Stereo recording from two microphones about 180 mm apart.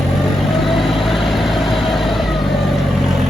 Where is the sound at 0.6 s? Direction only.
Centre (ahead or behind).